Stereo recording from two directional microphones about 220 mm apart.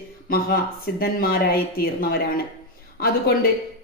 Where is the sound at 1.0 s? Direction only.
40° left (ahead or behind).